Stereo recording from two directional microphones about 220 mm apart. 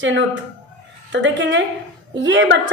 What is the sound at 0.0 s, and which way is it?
A woman's voice, 55° right (ahead or behind).